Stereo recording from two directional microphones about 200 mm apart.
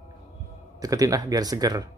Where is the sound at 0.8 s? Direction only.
20° right (ahead or behind).